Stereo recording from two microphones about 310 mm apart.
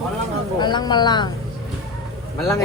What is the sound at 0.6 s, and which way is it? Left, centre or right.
Speech, centre.